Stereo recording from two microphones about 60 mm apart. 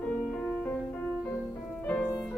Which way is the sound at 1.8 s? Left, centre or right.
Left.